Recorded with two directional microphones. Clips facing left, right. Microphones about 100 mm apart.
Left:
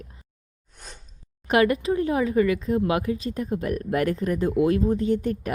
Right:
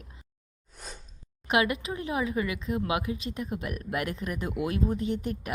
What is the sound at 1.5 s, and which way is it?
A woman's voice, 40° left (ahead or behind).